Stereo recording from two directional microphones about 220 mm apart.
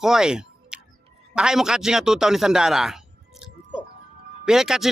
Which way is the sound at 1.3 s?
5° right (ahead or behind).